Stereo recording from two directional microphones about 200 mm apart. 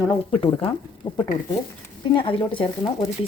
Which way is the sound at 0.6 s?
25° left (ahead or behind).